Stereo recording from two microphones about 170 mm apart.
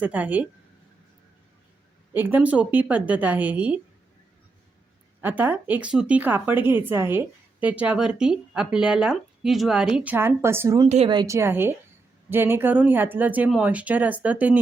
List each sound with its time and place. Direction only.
0.0 s speech: 10° right (ahead or behind)
2.1 s speech: 10° right (ahead or behind)
5.2 s speech: 10° right (ahead or behind)
10.8 s speech: 40° right (ahead or behind)
11.1 s speech: 20° right (ahead or behind)